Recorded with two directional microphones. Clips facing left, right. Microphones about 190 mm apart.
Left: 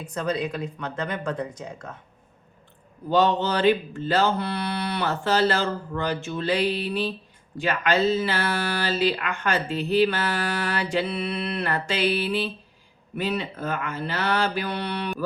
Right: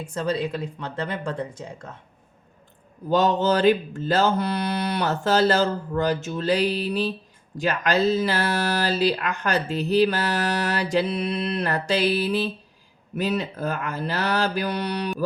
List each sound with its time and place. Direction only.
0.1 s speech: 30° right (ahead or behind)
3.1 s speech: 45° right (ahead or behind)